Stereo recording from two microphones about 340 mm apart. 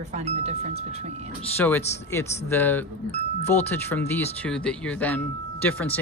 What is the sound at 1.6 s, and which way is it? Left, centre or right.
Speech, centre.